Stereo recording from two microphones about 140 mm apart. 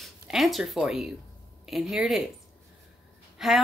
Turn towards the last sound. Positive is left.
turn(degrees=0)  # may be behind; listen again after turning